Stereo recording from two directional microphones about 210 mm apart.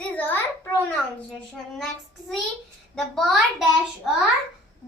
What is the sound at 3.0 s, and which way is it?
Speech, centre (ahead or behind).